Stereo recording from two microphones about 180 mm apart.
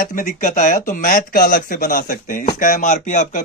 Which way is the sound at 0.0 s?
50° left (ahead or behind).